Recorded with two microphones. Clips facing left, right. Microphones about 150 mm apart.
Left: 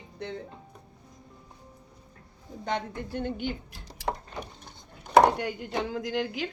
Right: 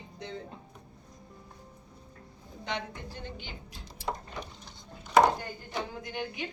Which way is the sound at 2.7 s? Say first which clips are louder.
Left 5 dB; 50° left (ahead or behind).